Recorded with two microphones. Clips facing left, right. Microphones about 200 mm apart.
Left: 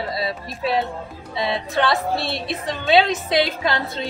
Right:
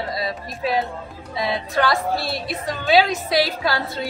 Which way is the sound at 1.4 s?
25° left (ahead or behind).